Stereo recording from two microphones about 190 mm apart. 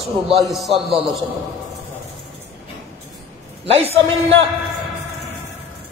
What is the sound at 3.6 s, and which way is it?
Speech, 30° right (ahead or behind).